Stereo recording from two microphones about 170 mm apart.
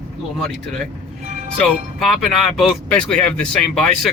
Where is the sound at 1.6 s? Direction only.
Centre (ahead or behind).